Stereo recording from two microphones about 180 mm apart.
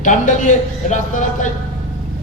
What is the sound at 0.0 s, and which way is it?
A man's voice, 45° left (ahead or behind).